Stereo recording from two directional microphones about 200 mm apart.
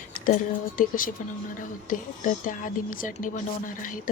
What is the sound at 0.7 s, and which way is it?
A woman's voice, 45° left (ahead or behind).